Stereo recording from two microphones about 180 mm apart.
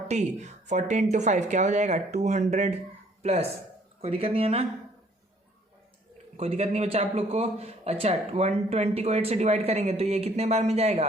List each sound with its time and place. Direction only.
0.1 s a man's voice: 40° right (ahead or behind)
6.3 s a man's voice: 35° right (ahead or behind)